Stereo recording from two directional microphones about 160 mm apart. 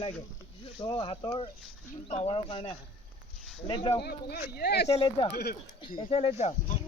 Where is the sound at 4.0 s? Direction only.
75° left (ahead or behind).